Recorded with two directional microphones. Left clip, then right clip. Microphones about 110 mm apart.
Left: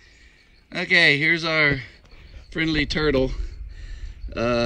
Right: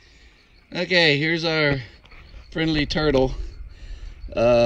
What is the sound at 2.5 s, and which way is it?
Speech, 20° right (ahead or behind).